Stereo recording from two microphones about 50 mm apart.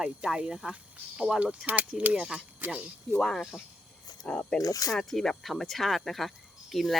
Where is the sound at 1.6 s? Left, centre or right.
Right.